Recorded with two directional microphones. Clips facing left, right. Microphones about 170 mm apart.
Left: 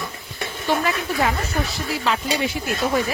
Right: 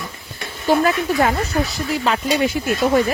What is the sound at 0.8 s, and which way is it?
Speech, 45° right (ahead or behind).